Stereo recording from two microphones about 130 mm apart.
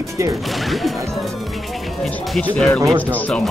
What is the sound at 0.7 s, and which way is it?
Speech, centre (ahead or behind).